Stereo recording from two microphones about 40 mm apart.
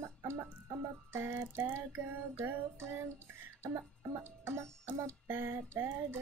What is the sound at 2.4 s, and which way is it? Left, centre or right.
Child singing, right.